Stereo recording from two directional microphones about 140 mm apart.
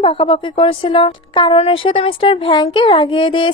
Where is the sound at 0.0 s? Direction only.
40° left (ahead or behind).